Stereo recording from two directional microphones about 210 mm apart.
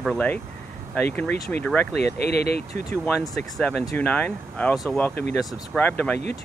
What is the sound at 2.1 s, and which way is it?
Speech, 50° left (ahead or behind).